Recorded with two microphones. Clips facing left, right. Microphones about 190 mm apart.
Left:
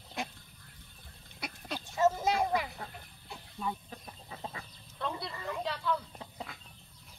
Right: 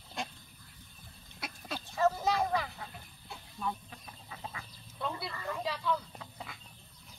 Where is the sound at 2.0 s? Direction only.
20° left (ahead or behind).